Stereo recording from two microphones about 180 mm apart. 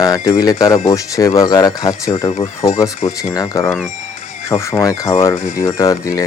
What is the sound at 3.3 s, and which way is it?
Speech, 20° left (ahead or behind).